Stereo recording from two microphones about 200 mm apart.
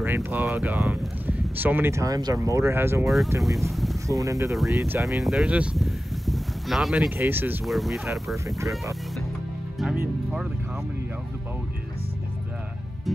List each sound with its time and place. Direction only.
0.0 s speech: 10° right (ahead or behind)
4.1 s speech: 15° right (ahead or behind); by 8.0 s centre (ahead or behind)
8.5 s speech: 15° right (ahead or behind)
9.8 s music: centre (ahead or behind)